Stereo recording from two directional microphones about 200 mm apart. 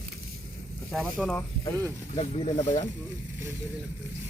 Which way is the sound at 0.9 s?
Centre (ahead or behind).